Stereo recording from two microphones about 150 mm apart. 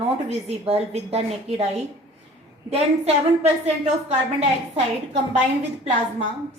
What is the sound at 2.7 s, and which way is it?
Speech, 45° right (ahead or behind).